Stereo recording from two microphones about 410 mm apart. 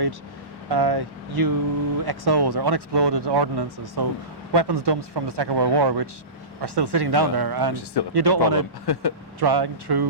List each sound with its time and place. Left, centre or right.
0.7 s speech: right
8.9 s speech: left
9.4 s speech: right